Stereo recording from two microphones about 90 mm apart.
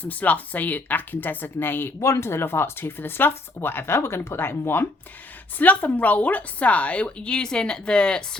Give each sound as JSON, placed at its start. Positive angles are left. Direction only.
{"t": 0.0, "sound": "a woman's voice", "side_deg": 15}